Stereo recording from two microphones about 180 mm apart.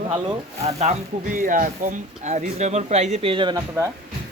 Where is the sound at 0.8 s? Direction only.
45° right (ahead or behind); by 3.6 s 25° right (ahead or behind).